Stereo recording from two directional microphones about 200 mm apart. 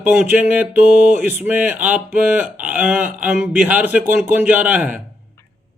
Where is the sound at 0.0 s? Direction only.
10° right (ahead or behind).